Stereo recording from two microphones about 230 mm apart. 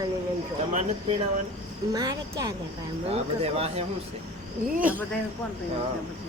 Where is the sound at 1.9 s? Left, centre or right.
Centre.